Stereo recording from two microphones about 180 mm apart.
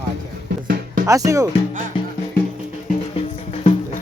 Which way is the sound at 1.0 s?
20° right (ahead or behind).